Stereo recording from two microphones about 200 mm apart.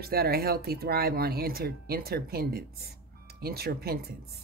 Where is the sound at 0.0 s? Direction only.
50° right (ahead or behind).